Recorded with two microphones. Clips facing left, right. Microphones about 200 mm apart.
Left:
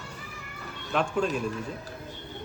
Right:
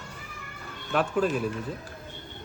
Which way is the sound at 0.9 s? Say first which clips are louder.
Right 2 dB; 5° right (ahead or behind).